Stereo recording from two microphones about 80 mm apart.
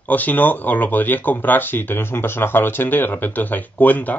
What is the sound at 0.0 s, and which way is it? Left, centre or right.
Speech, left.